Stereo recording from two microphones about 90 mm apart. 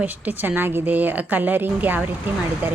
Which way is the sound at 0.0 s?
20° right (ahead or behind).